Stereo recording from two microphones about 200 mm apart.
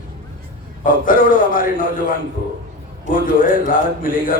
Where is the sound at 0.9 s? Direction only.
45° left (ahead or behind).